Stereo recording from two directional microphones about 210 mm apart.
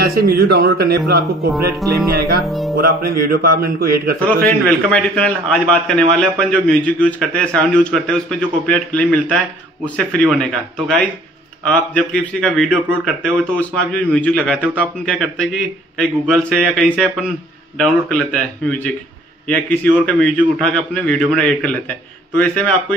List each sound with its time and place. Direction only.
0.0 s speech: 45° right (ahead or behind)
1.5 s a man's voice: centre (ahead or behind)
2.8 s speech: 45° right (ahead or behind)
4.5 s a man's voice: 5° left (ahead or behind)